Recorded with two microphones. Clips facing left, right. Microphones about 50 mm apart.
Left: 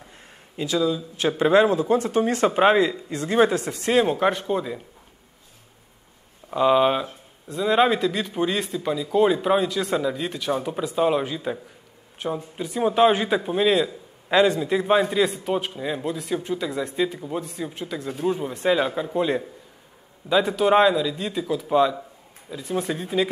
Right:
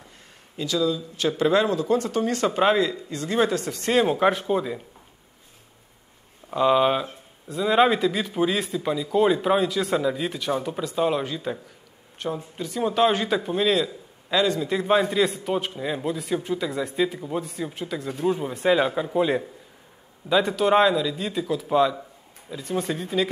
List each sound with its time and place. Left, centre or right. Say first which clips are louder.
0.6 s speech: left 1 dB; left
3.8 s a man's voice: even; centre
6.5 s a man's voice: left 1 dB; centre
14.3 s speech: left 4 dB; left
14.6 s a man's voice: left 1 dB; centre